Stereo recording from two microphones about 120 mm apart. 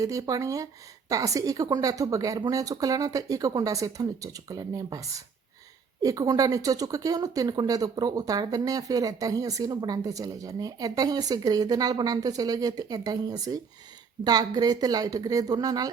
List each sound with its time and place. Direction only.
0.0 s speech: 30° right (ahead or behind)